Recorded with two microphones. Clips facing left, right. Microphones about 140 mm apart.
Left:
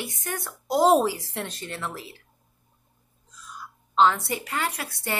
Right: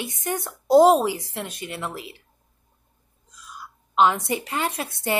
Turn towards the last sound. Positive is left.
turn(degrees=-20)  # may be behind; listen again after turning